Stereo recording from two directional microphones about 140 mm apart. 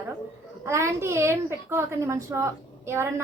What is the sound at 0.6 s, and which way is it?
A woman's voice, 20° right (ahead or behind).